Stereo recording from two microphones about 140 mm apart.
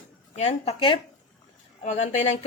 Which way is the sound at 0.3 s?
50° left (ahead or behind).